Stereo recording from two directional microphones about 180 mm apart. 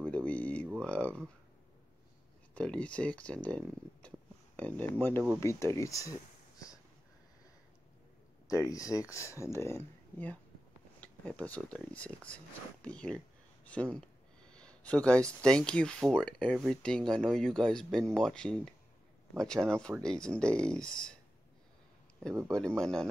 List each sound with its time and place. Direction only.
0.1 s a sound: 10° left (ahead or behind)
2.5 s speech: 5° left (ahead or behind)
8.5 s speech: 20° left (ahead or behind)
22.5 s speech: 5° left (ahead or behind)